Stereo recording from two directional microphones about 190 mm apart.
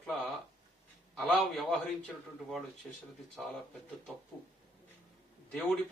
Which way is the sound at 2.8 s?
5° left (ahead or behind).